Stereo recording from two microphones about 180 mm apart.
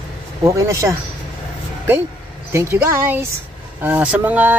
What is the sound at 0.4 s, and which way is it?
Speech, 15° right (ahead or behind).